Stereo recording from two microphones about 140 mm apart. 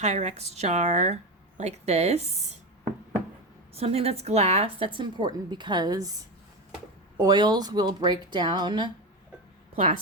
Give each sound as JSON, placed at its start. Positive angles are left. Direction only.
{"t": 0.0, "sound": "speech", "side_deg": -55}
{"t": 3.8, "sound": "speech", "side_deg": -45}
{"t": 4.9, "sound": "speech", "side_deg": -35}
{"t": 7.2, "sound": "speech", "side_deg": -30}